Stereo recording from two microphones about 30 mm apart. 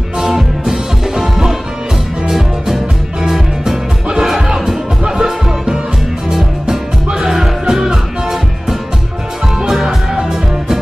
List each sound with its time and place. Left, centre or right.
0.2 s music: centre
5.0 s music: right
7.2 s music: centre